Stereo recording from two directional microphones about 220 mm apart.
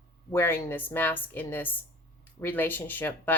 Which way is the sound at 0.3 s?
10° left (ahead or behind).